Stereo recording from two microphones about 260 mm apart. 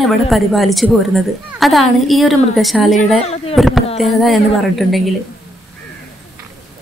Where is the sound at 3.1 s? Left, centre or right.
Left.